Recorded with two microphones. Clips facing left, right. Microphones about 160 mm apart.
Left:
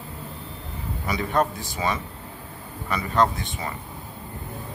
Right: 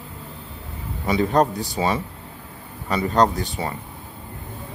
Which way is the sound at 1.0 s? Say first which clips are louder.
Right 5 dB; 30° right (ahead or behind).